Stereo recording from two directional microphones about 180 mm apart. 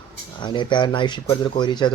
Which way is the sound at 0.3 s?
25° left (ahead or behind).